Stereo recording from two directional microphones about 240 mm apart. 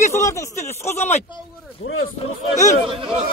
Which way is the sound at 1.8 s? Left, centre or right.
Left.